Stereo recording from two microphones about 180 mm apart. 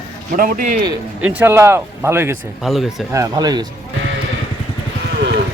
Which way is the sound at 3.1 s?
20° right (ahead or behind).